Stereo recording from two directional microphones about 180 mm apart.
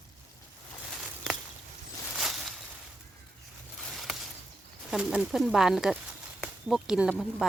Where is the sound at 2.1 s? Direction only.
Centre (ahead or behind).